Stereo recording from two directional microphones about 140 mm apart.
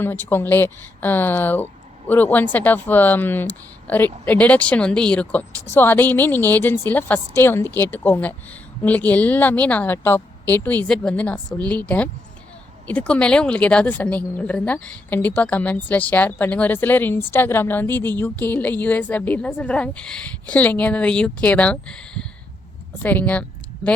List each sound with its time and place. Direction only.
0.0 s speech: 15° left (ahead or behind)